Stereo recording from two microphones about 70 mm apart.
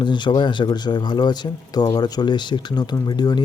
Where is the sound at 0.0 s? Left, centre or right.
Left.